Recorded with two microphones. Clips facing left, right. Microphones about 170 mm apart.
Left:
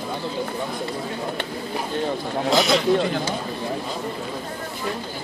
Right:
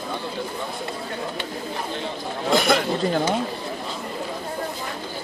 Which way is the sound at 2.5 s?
55° right (ahead or behind).